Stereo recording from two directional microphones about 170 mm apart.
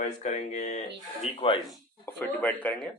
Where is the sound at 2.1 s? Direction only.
10° left (ahead or behind).